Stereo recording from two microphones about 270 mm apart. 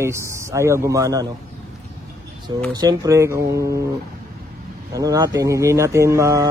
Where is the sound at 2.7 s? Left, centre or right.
Centre.